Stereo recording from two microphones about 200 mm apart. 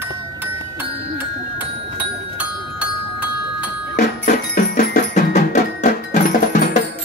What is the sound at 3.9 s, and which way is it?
Percussion, 45° left (ahead or behind).